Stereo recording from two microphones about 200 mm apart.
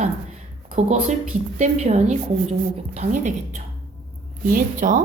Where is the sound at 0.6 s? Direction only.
35° right (ahead or behind).